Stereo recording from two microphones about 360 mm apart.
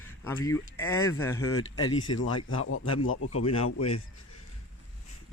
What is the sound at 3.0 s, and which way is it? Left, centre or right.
Speech, left.